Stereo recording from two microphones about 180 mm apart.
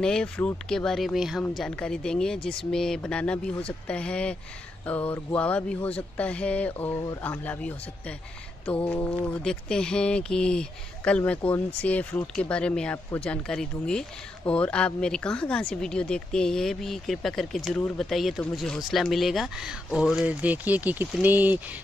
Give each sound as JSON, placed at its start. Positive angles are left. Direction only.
{"t": 0.0, "sound": "speech", "side_deg": 5}